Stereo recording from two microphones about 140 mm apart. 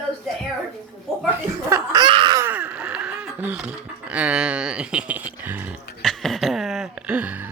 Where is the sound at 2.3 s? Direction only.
15° right (ahead or behind).